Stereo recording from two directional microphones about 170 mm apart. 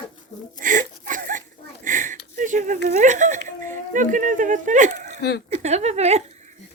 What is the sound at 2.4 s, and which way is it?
Speech, 50° right (ahead or behind).